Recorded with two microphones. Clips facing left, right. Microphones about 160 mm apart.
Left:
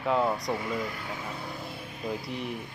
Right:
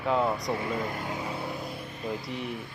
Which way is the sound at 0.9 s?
45° right (ahead or behind).